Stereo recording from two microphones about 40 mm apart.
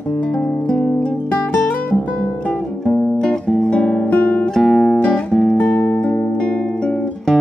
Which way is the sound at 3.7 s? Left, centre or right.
Left.